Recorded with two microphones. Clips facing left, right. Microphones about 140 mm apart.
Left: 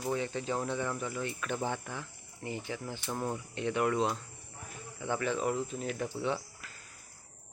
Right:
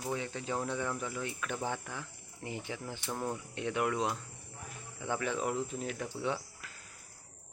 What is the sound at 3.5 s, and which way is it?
Speech, 10° right (ahead or behind).